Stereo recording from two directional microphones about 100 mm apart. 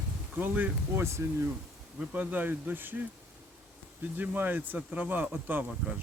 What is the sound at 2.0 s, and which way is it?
Speech, 15° right (ahead or behind).